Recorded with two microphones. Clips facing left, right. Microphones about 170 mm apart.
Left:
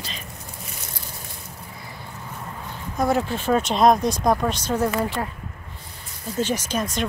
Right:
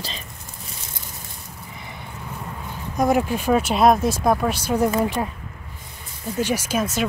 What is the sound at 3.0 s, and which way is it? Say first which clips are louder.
Speech: right 2 dB; 15° right (ahead or behind).